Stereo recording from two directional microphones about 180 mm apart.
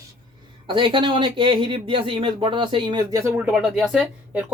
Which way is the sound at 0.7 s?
25° right (ahead or behind).